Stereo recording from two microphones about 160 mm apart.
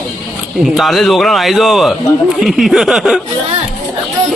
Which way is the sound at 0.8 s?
Centre (ahead or behind).